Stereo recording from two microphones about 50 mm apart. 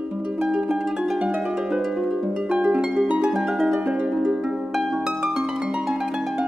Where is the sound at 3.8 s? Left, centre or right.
Right.